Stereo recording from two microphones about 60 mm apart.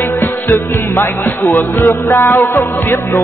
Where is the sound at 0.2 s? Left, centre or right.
Left.